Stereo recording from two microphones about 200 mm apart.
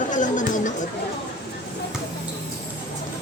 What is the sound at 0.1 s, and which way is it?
Chatter, 40° left (ahead or behind).